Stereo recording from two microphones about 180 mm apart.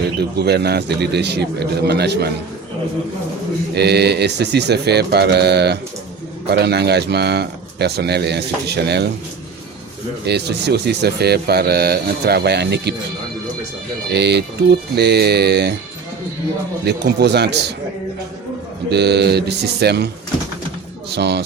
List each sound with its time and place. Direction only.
0.2 s speech: 65° right (ahead or behind)
3.8 s speech: 65° right (ahead or behind)
10.2 s speech: 65° right (ahead or behind)
14.1 s speech: 70° right (ahead or behind)
16.8 s speech: 70° right (ahead or behind)
18.9 s speech: 65° right (ahead or behind)
21.2 s speech: 65° right (ahead or behind)